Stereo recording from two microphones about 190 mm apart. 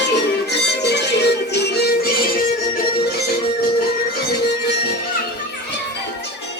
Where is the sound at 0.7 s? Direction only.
65° left (ahead or behind).